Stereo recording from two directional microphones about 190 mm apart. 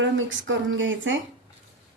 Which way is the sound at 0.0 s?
85° right.